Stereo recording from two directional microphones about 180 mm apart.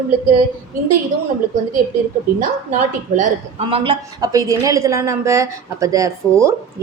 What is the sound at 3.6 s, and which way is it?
Speech, 30° right (ahead or behind).